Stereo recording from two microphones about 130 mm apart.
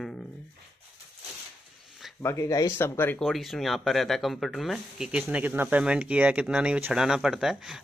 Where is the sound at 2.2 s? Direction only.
25° left (ahead or behind).